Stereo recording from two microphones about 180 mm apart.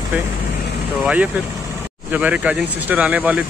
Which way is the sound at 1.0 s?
10° right (ahead or behind).